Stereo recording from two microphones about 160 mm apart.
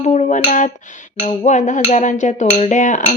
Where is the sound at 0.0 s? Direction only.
45° left (ahead or behind).